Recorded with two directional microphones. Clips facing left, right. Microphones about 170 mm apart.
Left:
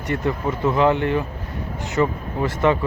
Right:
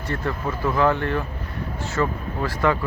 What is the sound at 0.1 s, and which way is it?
Speech, 20° left (ahead or behind).